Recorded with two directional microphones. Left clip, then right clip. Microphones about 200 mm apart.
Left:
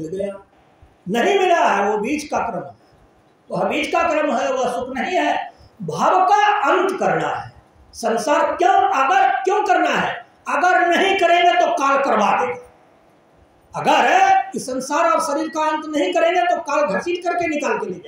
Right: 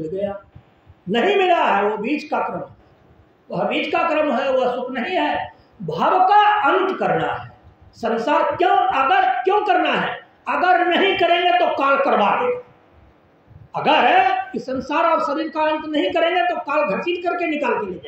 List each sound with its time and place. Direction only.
1.1 s a woman's voice: centre (ahead or behind)
3.4 s a woman's voice: centre (ahead or behind)
13.7 s a woman's voice: centre (ahead or behind)